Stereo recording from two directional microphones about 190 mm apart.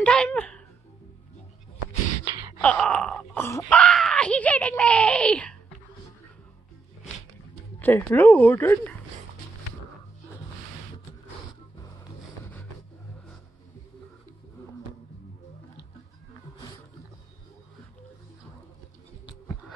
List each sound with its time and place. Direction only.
0.0 s a sound: 5° left (ahead or behind)
2.2 s wail: 20° right (ahead or behind)
2.6 s speech: 5° left (ahead or behind)
7.8 s speech: 10° left (ahead or behind)